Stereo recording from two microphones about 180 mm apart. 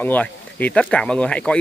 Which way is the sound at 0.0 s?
10° left (ahead or behind).